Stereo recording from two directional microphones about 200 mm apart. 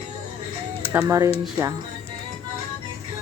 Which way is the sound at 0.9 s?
15° right (ahead or behind).